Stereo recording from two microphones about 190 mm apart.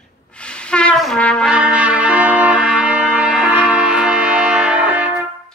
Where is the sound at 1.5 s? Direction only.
5° right (ahead or behind).